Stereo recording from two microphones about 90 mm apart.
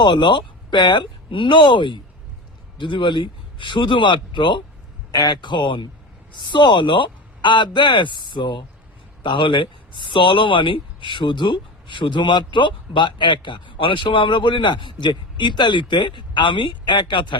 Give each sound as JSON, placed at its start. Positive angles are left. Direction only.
{"t": 0.0, "sound": "speech", "side_deg": 60}